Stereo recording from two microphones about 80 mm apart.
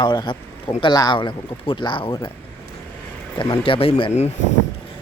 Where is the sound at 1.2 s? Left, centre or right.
Left.